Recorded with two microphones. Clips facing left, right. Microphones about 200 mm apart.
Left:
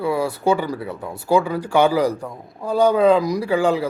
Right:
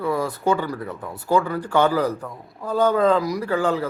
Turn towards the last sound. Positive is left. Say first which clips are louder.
# left 3 dB
turn(degrees=10)  # may be behind; listen again after turning